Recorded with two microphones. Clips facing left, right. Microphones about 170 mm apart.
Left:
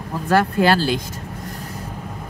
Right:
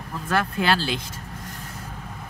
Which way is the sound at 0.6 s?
45° left (ahead or behind).